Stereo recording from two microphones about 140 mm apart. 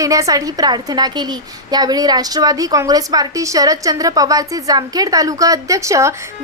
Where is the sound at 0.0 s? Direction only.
25° right (ahead or behind).